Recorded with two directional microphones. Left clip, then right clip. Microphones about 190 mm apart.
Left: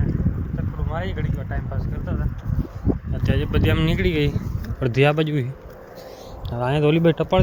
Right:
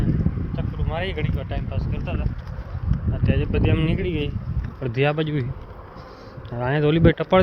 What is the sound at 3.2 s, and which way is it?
Speech, 10° left (ahead or behind).